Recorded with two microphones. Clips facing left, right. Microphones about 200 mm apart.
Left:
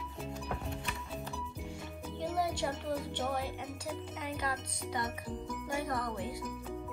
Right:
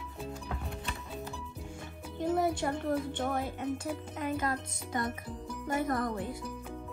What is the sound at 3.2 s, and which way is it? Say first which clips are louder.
Speech: right 3 dB; 50° right (ahead or behind).